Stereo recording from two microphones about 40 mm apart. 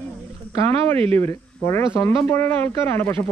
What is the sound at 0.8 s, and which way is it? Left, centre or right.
Speech, left.